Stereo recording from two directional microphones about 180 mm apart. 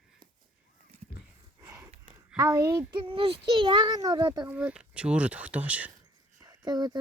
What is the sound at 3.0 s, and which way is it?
A child's voice, 30° right (ahead or behind).